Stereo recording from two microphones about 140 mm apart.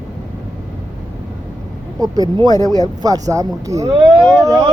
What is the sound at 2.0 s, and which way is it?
Speech, 25° right (ahead or behind).